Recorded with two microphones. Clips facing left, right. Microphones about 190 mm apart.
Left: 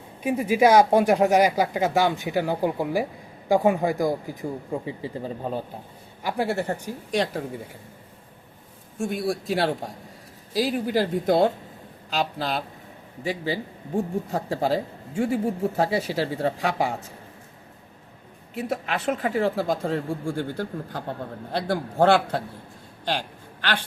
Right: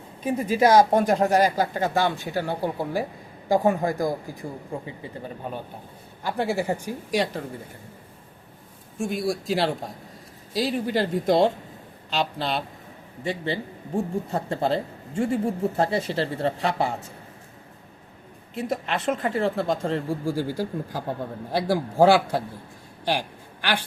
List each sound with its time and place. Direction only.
0.2 s speech: 15° left (ahead or behind)
4.9 s speech: 30° left (ahead or behind)
6.2 s speech: 10° left (ahead or behind)
6.5 s a man's voice: 10° right (ahead or behind)
9.0 s speech: centre (ahead or behind)
18.5 s a man's voice: 5° left (ahead or behind)
23.0 s a sound: 10° right (ahead or behind)